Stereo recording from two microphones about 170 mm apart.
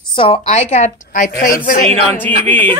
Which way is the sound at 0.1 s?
30° left (ahead or behind).